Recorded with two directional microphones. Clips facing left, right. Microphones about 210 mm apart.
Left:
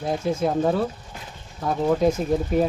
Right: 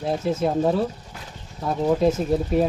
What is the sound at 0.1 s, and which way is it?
Speech, 5° right (ahead or behind).